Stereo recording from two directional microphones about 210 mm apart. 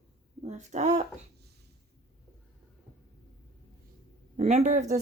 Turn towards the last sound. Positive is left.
turn(degrees=-35)  # may be behind; listen again after turning